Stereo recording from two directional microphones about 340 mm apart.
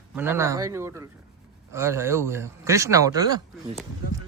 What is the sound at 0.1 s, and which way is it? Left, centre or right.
Speech, centre.